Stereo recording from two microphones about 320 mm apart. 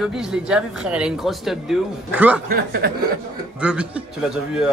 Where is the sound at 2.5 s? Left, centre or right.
Right.